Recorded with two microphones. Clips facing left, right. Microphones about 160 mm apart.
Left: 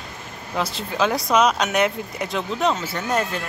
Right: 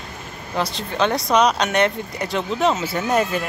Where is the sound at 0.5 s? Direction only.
5° left (ahead or behind).